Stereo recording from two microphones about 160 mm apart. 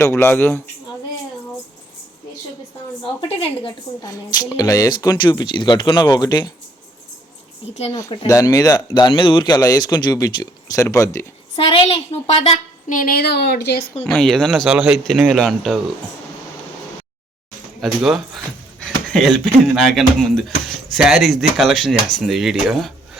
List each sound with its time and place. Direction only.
0.0 s speech: 15° left (ahead or behind)
3.2 s a woman's voice: 35° left (ahead or behind)
4.0 s speech: 25° left (ahead or behind)
8.3 s speech: 20° left (ahead or behind)
11.5 s a woman's voice: 35° left (ahead or behind)
13.0 s speech: 70° left (ahead or behind); by 13.9 s 90° left
14.1 s speech: 5° left (ahead or behind)
17.7 s speech: 5° right (ahead or behind)
18.8 s a sound: centre (ahead or behind)
19.7 s speech: centre (ahead or behind)